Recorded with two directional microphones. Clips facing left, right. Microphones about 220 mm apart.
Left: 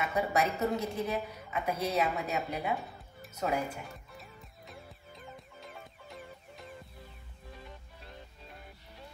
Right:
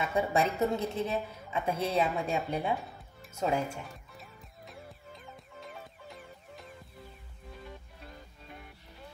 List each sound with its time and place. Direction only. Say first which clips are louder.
0.0 s a woman's voice: right 2 dB; 30° right (ahead or behind)
2.7 s music: right 1 dB; centre (ahead or behind)
3.3 s a woman's voice: right 2 dB; 25° right (ahead or behind)
3.8 s music: even; centre (ahead or behind)